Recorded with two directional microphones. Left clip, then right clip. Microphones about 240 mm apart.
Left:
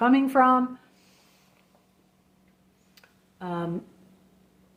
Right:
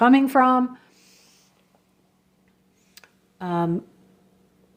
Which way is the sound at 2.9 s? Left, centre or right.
Right.